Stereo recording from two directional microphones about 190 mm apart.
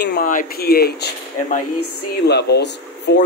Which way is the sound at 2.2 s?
60° left (ahead or behind).